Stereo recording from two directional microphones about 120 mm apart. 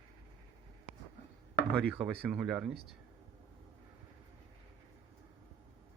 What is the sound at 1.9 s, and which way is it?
Speech, 5° right (ahead or behind).